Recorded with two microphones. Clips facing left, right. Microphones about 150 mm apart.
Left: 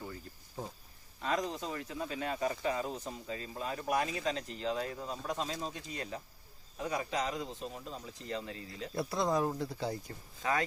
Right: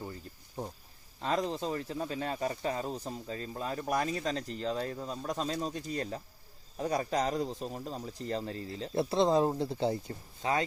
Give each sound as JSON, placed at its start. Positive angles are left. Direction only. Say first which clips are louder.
{"t": 1.2, "sound": "speech", "louder": "right 3 dB", "side_deg": -30}